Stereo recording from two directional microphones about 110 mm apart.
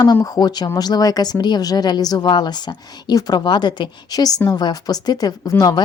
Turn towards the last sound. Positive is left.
turn(degrees=35)  # may be behind; listen again after turning